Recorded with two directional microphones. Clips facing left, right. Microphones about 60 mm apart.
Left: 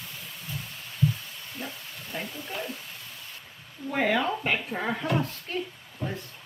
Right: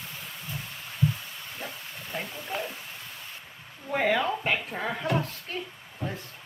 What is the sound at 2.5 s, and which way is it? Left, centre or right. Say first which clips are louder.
Speech: right 3 dB; right.